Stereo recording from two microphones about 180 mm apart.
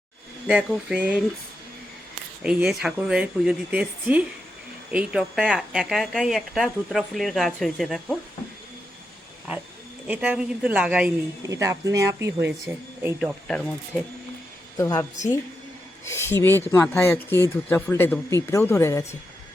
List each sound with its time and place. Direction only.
0.4 s speech: 5° right (ahead or behind)
2.4 s speech: 5° right (ahead or behind)
10.1 s speech: 5° right (ahead or behind)
11.4 s speech: 15° right (ahead or behind)
13.1 s speech: centre (ahead or behind)
14.8 s speech: 20° left (ahead or behind)
16.0 s speech: 15° left (ahead or behind)